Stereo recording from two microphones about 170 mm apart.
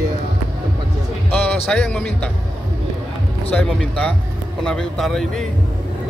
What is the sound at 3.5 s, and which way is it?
Speech, 5° left (ahead or behind).